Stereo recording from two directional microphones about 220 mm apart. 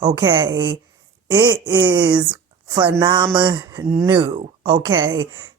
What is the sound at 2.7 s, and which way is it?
Speech, 15° right (ahead or behind).